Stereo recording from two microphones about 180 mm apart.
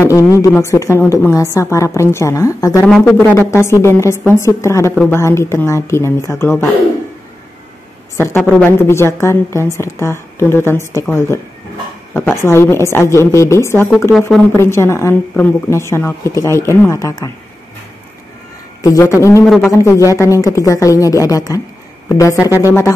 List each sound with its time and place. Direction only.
0.0 s a woman's voice: 20° left (ahead or behind)
8.2 s a woman's voice: 10° left (ahead or behind)
18.8 s a woman's voice: 20° left (ahead or behind)
19.4 s a man's voice: centre (ahead or behind)
19.7 s a woman's voice: 15° left (ahead or behind)